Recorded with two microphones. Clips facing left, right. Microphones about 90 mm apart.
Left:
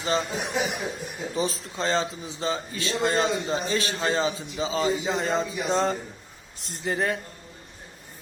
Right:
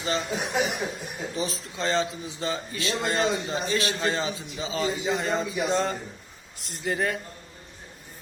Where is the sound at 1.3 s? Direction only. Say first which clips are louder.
Left 4 dB; 35° left (ahead or behind).